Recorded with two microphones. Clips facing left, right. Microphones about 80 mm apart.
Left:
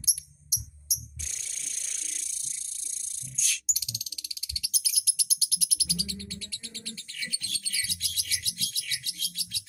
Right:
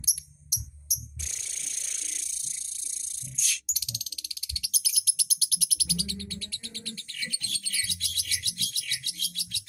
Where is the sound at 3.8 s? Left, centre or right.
Centre.